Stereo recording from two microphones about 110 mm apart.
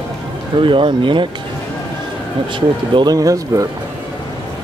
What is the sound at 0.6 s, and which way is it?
Speech, 50° right (ahead or behind).